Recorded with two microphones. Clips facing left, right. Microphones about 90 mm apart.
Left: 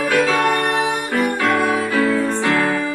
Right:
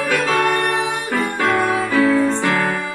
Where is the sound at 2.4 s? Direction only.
20° right (ahead or behind).